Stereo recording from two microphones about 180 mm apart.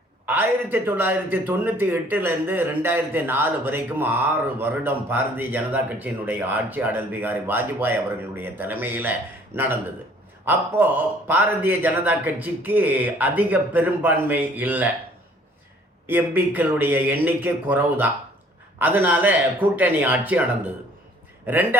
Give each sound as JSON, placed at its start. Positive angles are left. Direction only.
{"t": 0.3, "sound": "speech", "side_deg": -10}
{"t": 10.4, "sound": "speech", "side_deg": -10}
{"t": 16.0, "sound": "speech", "side_deg": -10}
{"t": 21.4, "sound": "speech", "side_deg": -10}